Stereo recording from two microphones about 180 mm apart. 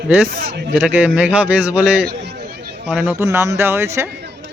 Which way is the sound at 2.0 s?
65° right (ahead or behind).